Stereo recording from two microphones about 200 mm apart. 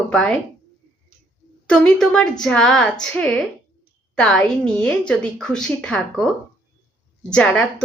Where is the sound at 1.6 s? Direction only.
5° left (ahead or behind).